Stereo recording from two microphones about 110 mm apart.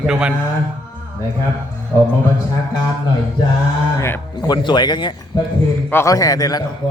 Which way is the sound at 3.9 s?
20° left (ahead or behind).